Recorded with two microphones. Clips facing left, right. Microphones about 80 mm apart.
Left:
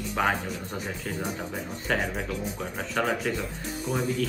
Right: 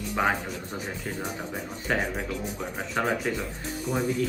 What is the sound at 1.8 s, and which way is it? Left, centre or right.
Speech, centre.